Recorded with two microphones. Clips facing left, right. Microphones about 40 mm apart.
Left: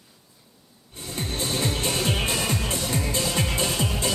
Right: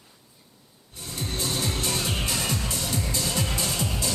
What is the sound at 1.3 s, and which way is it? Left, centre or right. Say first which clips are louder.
Music: left 2 dB; left.